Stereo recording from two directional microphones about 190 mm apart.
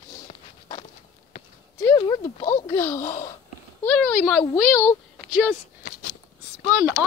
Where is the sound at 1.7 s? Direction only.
15° left (ahead or behind).